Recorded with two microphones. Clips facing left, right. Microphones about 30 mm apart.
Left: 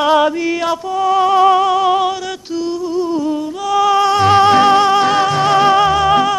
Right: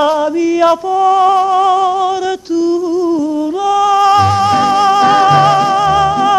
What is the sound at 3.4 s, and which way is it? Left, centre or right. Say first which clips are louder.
Music: right 5 dB; centre.